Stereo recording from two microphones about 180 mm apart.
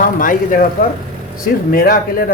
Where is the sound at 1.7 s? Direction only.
55° left (ahead or behind).